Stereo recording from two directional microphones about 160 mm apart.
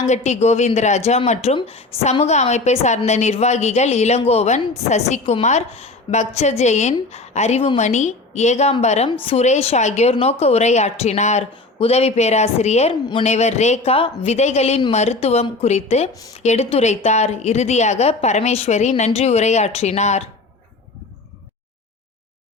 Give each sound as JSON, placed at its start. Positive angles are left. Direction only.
{"t": 0.0, "sound": "a woman's voice", "side_deg": 45}